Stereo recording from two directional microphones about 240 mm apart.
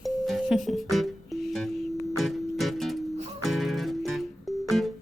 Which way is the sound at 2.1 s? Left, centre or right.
Centre.